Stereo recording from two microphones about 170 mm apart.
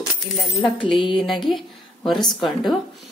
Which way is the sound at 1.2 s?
Centre (ahead or behind).